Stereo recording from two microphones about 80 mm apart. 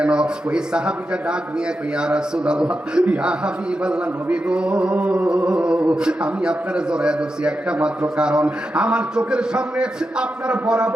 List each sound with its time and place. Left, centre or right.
0.0 s a man's voice: centre